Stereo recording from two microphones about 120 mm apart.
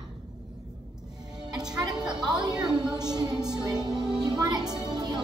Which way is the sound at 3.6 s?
35° right (ahead or behind).